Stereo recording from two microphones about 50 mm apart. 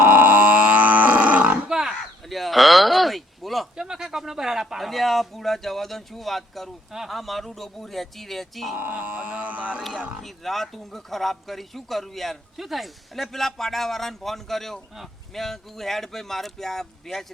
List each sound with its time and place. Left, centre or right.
0.0 s grunt: right
1.6 s wild animals: centre
2.3 s a sound: centre
3.8 s speech: centre
8.7 s speech: right
9.0 s a sound: right
10.2 s speech: centre